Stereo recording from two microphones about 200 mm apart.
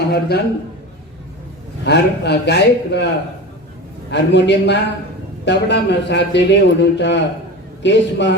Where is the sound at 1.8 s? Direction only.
55° left (ahead or behind).